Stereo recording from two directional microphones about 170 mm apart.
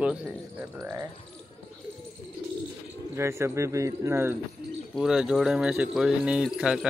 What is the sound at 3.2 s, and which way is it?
Speech, 15° right (ahead or behind).